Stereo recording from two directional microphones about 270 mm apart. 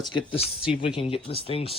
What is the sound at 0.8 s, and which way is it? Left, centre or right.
Speech, centre.